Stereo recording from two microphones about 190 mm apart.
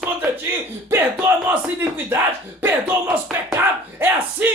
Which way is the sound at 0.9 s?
15° right (ahead or behind).